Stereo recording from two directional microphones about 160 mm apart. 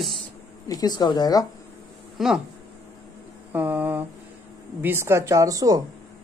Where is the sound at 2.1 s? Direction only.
Centre (ahead or behind).